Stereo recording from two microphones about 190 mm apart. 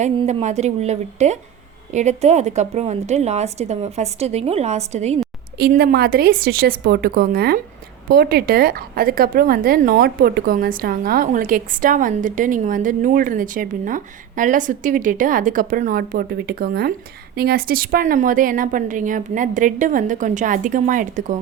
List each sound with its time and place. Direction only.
0.0 s a woman's voice: 35° right (ahead or behind)
5.5 s a woman's voice: 55° right (ahead or behind)